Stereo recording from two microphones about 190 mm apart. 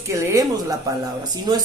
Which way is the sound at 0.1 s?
15° right (ahead or behind).